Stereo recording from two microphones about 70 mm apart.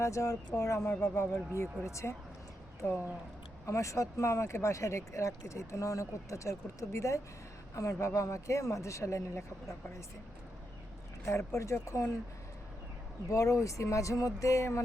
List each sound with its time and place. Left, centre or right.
0.0 s speech: left
11.3 s speech: left
13.3 s speech: left